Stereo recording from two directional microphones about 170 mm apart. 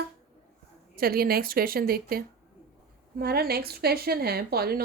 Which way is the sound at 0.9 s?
60° right (ahead or behind).